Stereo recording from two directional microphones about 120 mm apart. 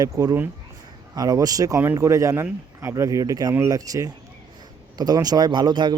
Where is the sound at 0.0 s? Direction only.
30° right (ahead or behind).